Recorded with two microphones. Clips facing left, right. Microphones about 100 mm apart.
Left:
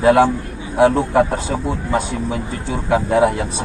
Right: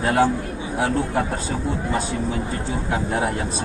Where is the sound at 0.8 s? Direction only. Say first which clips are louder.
Left 9 dB; 90° left.